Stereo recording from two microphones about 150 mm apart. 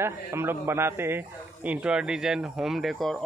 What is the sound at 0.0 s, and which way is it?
A man's voice, 15° right (ahead or behind).